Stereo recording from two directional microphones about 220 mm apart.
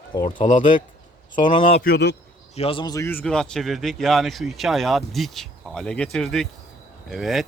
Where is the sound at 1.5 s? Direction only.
25° left (ahead or behind).